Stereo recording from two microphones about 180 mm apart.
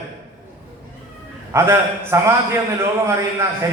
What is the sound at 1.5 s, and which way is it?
A man's voice, 15° right (ahead or behind).